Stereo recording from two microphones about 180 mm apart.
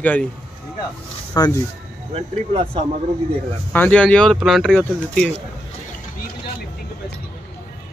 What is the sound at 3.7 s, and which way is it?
Speech, 10° left (ahead or behind).